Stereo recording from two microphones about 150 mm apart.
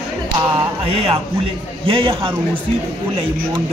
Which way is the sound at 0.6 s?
40° right (ahead or behind).